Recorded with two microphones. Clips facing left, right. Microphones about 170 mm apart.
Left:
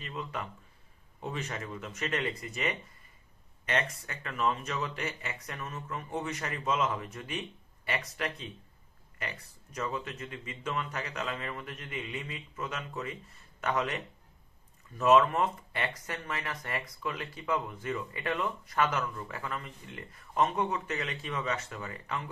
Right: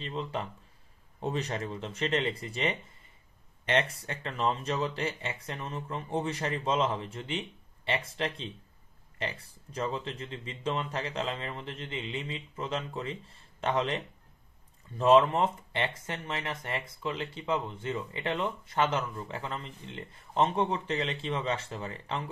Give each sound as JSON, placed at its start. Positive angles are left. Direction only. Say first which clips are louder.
{"t": 0.0, "sound": "speech", "louder": "right 4 dB", "side_deg": -30}